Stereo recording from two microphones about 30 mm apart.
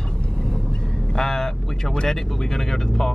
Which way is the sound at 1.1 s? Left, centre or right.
Centre.